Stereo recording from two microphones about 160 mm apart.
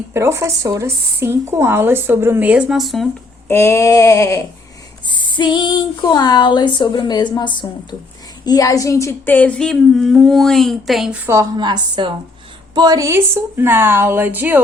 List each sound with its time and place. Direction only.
0.1 s speech: 15° right (ahead or behind); by 3.1 s centre (ahead or behind)
3.5 s speech: 15° left (ahead or behind)
8.4 s humming: 20° left (ahead or behind); by 11.2 s centre (ahead or behind)
11.5 s a woman's voice: 30° right (ahead or behind); by 14.6 s 10° right (ahead or behind)